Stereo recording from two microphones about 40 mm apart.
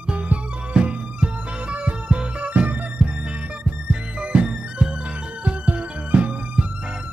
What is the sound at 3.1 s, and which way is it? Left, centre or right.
Music, right.